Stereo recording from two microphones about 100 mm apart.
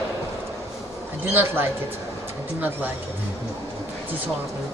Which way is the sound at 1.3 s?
20° right (ahead or behind).